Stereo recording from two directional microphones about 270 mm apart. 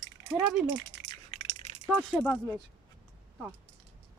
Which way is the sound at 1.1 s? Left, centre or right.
Left.